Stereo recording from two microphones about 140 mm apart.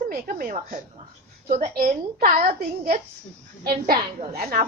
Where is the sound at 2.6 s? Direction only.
90° right.